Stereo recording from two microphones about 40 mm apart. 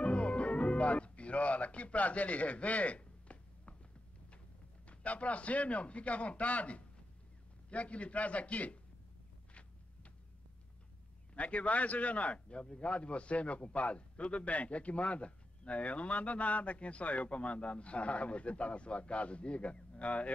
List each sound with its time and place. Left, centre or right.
0.0 s music: left
4.8 s a man's voice: left
9.5 s a sound: left
11.3 s a man's voice: left